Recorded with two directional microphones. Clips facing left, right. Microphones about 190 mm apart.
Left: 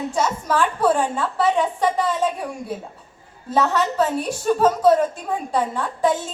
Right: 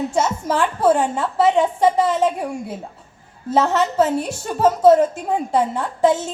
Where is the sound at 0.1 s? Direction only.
25° right (ahead or behind).